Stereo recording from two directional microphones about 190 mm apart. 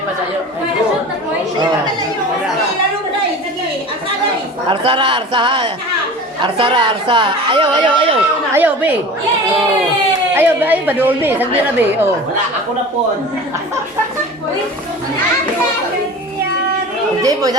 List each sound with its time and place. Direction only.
4.7 s speech: 25° right (ahead or behind)
8.5 s a woman's voice: 10° right (ahead or behind)
10.3 s a woman's voice: 10° right (ahead or behind)
17.2 s speech: 20° right (ahead or behind)